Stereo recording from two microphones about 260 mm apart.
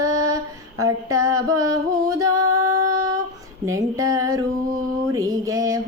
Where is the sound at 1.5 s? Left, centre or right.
Centre.